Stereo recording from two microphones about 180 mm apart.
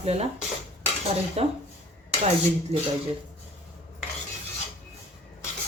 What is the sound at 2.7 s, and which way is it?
Speech, 35° right (ahead or behind).